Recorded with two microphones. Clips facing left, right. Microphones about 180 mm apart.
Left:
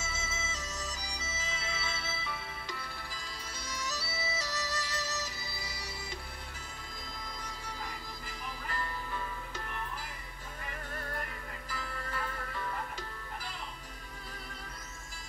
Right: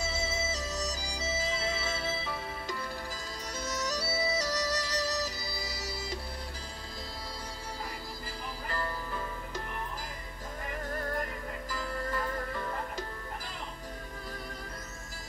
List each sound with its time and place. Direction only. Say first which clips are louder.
0.0 s music: right 8 dB; 35° right (ahead or behind)
10.9 s music: right 7 dB; 40° right (ahead or behind)